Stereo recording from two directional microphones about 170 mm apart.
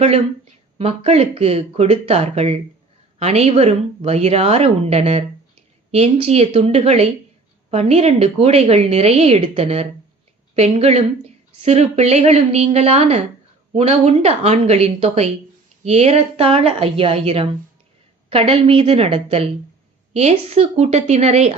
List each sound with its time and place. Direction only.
0.8 s a woman's voice: 40° right (ahead or behind)